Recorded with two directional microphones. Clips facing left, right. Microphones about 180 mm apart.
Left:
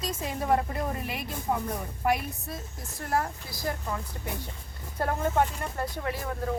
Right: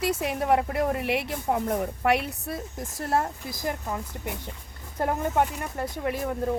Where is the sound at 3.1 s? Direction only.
20° right (ahead or behind).